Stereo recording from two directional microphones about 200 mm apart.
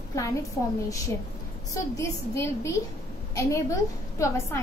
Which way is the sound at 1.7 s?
15° left (ahead or behind).